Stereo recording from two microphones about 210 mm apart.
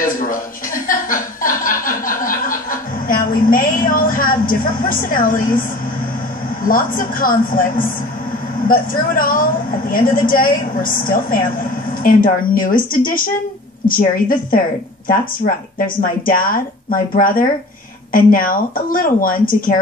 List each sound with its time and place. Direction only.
0.0 s chuckle: 40° left (ahead or behind)
6.6 s a woman's voice: 40° left (ahead or behind)
16.3 s a woman's voice: 40° left (ahead or behind)